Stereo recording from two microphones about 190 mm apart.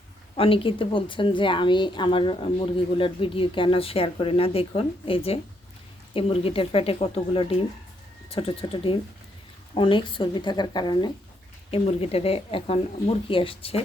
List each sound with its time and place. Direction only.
0.3 s a woman's voice: 30° left (ahead or behind)